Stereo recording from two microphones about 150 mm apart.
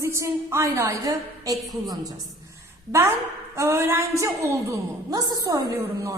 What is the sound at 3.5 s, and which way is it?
A woman's voice, 20° right (ahead or behind).